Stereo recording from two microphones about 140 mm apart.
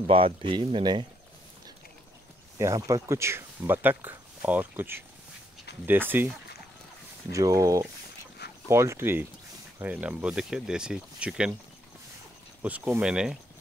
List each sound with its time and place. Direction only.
0.0 s speech: 40° right (ahead or behind)
2.6 s speech: 20° right (ahead or behind)
12.6 s speech: 10° right (ahead or behind)